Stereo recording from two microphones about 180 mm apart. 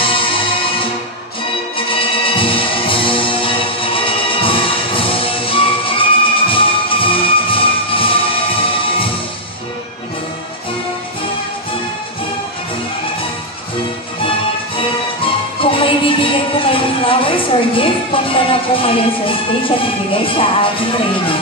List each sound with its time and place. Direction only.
0.0 s music: 30° left (ahead or behind)
15.6 s music: 30° left (ahead or behind)